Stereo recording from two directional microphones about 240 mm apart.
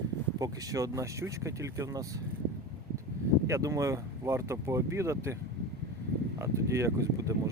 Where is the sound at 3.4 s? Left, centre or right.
Centre.